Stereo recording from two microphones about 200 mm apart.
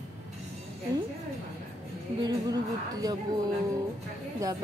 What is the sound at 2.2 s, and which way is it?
Speech, 20° right (ahead or behind).